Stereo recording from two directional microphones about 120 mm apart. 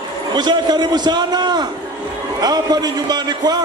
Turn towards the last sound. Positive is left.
turn(degrees=-35)  # may be behind; listen again after turning